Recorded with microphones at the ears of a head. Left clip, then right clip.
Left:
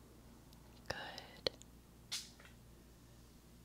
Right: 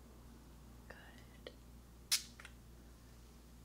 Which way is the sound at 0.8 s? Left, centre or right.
Left.